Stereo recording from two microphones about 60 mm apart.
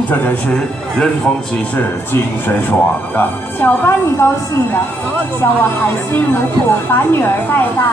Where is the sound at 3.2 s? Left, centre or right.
Left.